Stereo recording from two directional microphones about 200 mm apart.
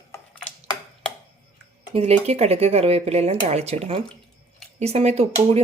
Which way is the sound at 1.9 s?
30° right (ahead or behind).